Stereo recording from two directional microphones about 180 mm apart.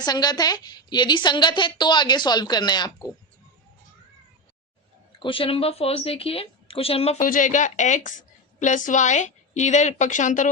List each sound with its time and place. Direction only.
0.0 s a woman's voice: 20° left (ahead or behind)
5.2 s a woman's voice: 30° left (ahead or behind)
7.2 s a woman's voice: 45° left (ahead or behind)